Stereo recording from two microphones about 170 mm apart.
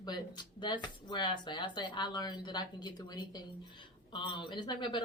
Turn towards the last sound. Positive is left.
turn(degrees=25)  # may be behind; listen again after turning